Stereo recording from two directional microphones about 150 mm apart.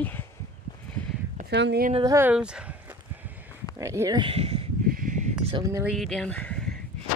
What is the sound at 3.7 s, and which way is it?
Speech, 20° right (ahead or behind).